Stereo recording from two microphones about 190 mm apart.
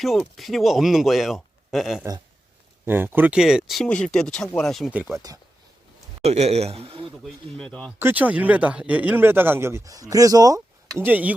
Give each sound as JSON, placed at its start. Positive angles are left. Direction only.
{"t": 0.0, "sound": "speech", "side_deg": 0}
{"t": 6.2, "sound": "speech", "side_deg": -35}
{"t": 7.3, "sound": "speech", "side_deg": 5}
{"t": 7.9, "sound": "speech", "side_deg": -10}